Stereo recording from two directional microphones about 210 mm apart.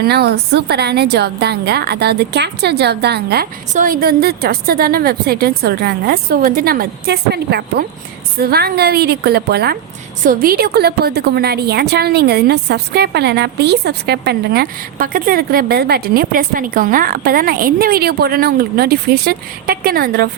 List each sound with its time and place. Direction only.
0.0 s a woman's voice: 50° right (ahead or behind)